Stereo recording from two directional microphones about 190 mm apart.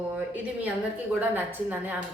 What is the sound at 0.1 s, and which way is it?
A woman's voice, 5° right (ahead or behind).